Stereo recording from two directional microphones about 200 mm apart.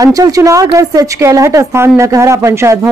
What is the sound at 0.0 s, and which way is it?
A woman's voice, 15° right (ahead or behind).